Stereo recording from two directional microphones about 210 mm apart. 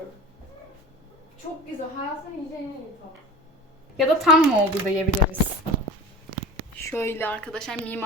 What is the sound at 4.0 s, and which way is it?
Speech, centre (ahead or behind).